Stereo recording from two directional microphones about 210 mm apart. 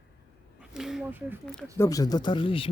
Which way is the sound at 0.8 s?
Centre (ahead or behind).